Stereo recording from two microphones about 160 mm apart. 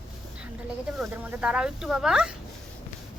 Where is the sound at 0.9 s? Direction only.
10° right (ahead or behind).